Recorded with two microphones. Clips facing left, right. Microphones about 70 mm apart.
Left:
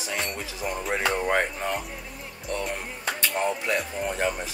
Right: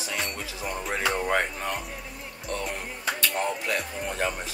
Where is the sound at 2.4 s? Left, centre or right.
Centre.